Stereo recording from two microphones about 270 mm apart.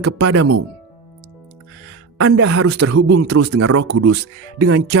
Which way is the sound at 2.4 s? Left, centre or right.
Right.